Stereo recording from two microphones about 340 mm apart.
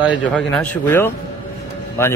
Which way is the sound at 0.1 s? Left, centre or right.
Centre.